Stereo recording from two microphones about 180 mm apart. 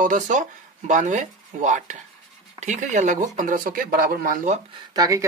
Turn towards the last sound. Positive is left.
turn(degrees=-20)  # may be behind; listen again after turning